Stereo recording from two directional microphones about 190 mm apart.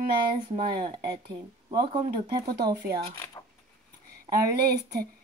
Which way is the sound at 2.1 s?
20° right (ahead or behind).